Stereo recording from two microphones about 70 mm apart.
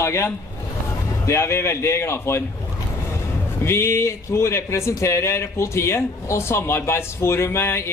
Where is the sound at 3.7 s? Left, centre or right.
Left.